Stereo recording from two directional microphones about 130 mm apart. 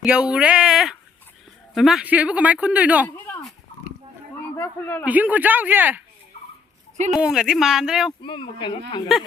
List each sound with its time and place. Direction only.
0.0 s a man's voice: 10° right (ahead or behind)
4.5 s speech: 15° left (ahead or behind)
5.0 s a man's voice: 10° right (ahead or behind)
7.1 s speech: 5° right (ahead or behind)
8.2 s speech: 40° left (ahead or behind)